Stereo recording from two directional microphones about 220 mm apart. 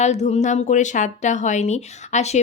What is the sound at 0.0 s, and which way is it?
Speech, 30° left (ahead or behind).